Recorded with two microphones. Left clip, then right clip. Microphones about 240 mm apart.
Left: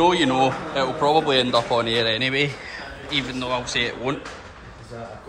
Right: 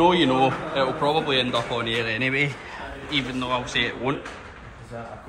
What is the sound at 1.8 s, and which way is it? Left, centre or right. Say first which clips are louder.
Speech: left 4 dB; left.